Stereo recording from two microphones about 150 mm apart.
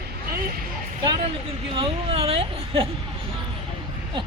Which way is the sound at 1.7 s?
40° right (ahead or behind).